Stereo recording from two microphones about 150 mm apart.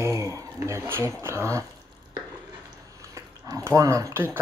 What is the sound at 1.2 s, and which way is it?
Speech, 20° right (ahead or behind).